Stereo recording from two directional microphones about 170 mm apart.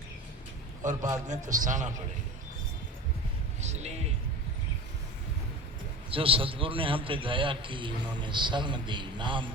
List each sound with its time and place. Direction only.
0.8 s a man's voice: 50° right (ahead or behind)
3.6 s music: 40° right (ahead or behind)
6.1 s a man's voice: 30° right (ahead or behind)